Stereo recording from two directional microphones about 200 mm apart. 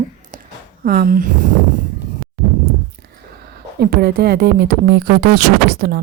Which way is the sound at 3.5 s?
50° right (ahead or behind).